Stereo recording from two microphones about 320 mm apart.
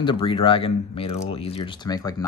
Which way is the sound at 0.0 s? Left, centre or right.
Centre.